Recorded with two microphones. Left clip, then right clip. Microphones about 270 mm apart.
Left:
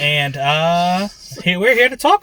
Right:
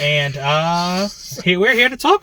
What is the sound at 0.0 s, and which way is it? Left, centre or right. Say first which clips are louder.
Speech: left 1 dB; centre.